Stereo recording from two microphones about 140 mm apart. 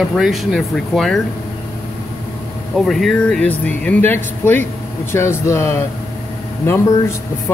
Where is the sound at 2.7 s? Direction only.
Centre (ahead or behind); by 5.8 s 20° left (ahead or behind).